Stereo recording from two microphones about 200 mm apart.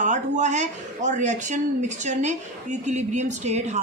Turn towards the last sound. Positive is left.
turn(degrees=-35)  # may be behind; listen again after turning